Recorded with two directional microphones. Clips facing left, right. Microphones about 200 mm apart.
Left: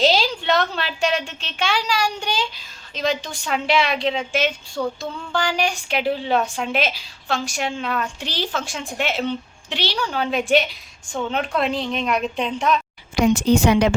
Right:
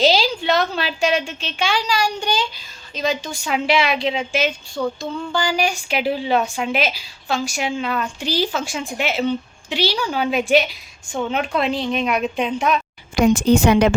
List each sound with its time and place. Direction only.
0.0 s a sound: centre (ahead or behind)
2.9 s speech: centre (ahead or behind)
13.1 s a woman's voice: 50° right (ahead or behind)